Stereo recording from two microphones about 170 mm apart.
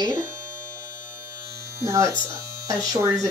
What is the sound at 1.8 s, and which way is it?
Speech, 15° right (ahead or behind).